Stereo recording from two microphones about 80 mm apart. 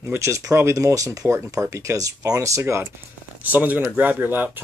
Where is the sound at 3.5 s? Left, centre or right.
Right.